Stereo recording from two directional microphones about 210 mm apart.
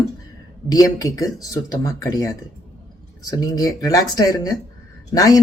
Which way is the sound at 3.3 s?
20° left (ahead or behind).